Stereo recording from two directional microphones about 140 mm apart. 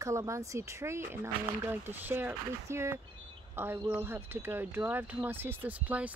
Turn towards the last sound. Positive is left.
turn(degrees=-10)  # may be behind; listen again after turning